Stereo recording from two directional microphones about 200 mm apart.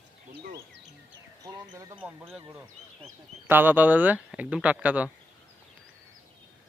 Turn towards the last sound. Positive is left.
turn(degrees=-5)  # may be behind; listen again after turning